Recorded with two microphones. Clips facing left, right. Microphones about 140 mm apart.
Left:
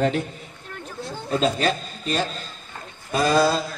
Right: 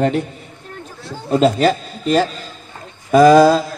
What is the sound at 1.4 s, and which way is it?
Speech, 70° right (ahead or behind).